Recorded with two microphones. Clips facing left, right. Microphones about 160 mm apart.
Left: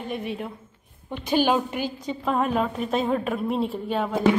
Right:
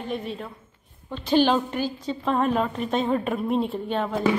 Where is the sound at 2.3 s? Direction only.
Centre (ahead or behind).